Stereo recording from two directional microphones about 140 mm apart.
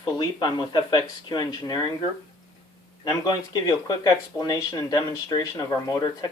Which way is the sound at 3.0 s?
30° left (ahead or behind).